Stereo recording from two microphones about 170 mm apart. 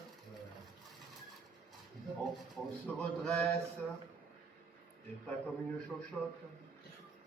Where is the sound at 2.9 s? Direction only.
5° left (ahead or behind).